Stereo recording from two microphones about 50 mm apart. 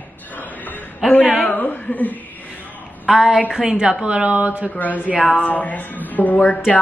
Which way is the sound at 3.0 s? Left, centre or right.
Centre.